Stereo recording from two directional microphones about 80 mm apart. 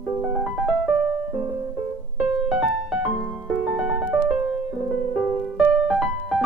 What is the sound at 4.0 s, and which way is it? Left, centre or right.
Music, centre.